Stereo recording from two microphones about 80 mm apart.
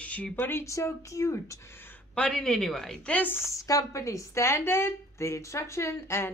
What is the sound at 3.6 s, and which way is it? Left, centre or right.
A woman's voice, left.